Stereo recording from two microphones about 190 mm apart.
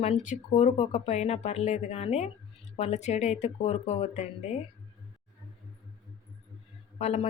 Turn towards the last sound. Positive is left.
turn(degrees=35)  # may be behind; listen again after turning